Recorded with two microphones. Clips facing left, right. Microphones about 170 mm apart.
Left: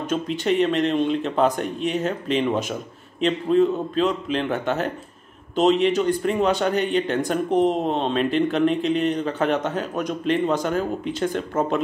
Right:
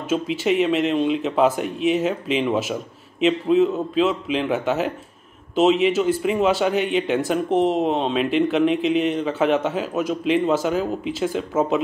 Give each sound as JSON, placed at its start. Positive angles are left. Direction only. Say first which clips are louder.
{"t": 0.1, "sound": "speech", "louder": "right 2 dB", "side_deg": -5}